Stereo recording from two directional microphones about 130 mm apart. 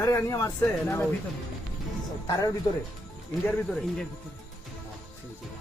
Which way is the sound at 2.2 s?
30° left (ahead or behind).